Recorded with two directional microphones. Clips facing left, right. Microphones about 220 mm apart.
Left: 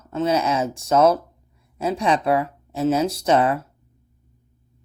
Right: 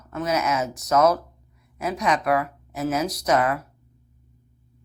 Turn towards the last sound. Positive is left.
turn(degrees=25)  # may be behind; listen again after turning